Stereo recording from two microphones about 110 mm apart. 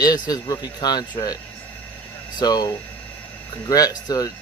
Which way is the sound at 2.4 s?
40° left (ahead or behind).